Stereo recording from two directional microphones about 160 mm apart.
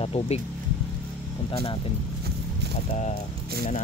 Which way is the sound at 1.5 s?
35° left (ahead or behind).